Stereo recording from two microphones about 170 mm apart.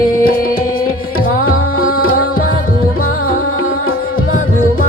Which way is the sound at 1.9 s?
60° left (ahead or behind).